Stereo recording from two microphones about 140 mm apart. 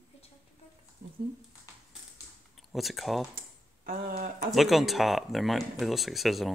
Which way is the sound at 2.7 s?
Centre (ahead or behind).